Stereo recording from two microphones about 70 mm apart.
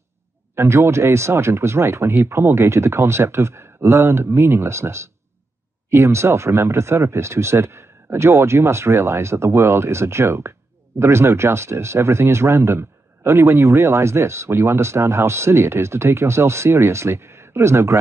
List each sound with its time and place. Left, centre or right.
0.6 s speech: right